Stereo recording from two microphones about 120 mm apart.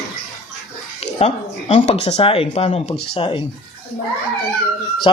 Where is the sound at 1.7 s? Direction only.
75° left (ahead or behind).